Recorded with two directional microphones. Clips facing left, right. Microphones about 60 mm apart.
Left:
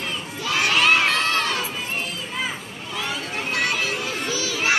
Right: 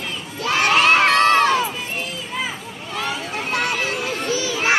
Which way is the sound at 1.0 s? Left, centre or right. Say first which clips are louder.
Right 7 dB; right.